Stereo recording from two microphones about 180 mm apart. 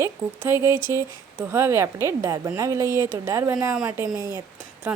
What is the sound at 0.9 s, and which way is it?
A woman's voice, 15° right (ahead or behind).